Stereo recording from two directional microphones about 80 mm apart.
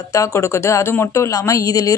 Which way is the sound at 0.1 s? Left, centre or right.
Left.